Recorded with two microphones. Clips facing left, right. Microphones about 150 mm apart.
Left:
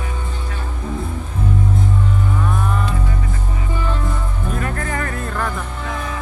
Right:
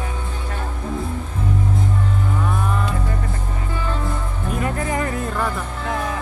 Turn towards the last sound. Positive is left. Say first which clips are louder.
# right 1 dB
turn(degrees=-15)  # may be behind; listen again after turning